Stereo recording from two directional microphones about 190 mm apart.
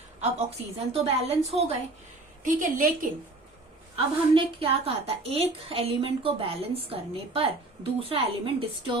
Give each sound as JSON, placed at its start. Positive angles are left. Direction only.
{"t": 0.2, "sound": "a woman's voice", "side_deg": -35}
{"t": 2.4, "sound": "a woman's voice", "side_deg": -45}
{"t": 3.9, "sound": "a woman's voice", "side_deg": -30}